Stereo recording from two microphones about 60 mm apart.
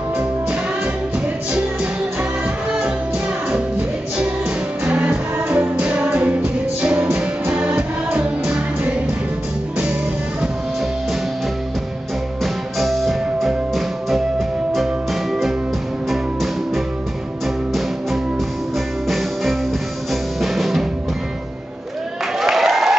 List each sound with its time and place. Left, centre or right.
4.8 s music: right
12.7 s music: centre
16.1 s music: centre
19.0 s music: centre
22.4 s applause: centre